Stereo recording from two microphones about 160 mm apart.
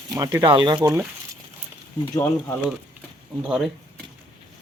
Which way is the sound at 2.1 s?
15° left (ahead or behind).